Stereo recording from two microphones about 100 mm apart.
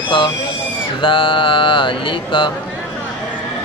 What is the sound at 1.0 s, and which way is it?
Speech, 60° left (ahead or behind).